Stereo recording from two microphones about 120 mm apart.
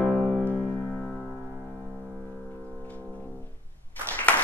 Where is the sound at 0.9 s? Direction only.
10° left (ahead or behind).